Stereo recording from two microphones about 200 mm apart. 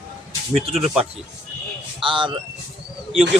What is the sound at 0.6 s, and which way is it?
Speech, 30° right (ahead or behind).